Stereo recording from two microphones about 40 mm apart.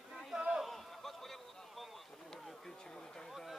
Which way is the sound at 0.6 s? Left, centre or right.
Centre.